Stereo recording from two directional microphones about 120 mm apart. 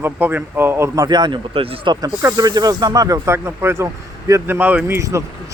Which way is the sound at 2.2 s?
30° right (ahead or behind).